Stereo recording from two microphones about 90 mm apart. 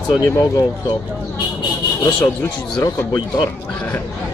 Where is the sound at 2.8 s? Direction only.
50° left (ahead or behind).